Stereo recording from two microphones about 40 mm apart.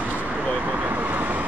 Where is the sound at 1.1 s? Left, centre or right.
Right.